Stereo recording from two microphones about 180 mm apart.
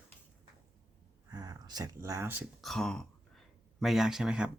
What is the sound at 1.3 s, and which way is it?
Speech, 20° right (ahead or behind).